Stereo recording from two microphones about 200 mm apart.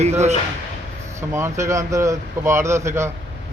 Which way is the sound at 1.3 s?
15° right (ahead or behind).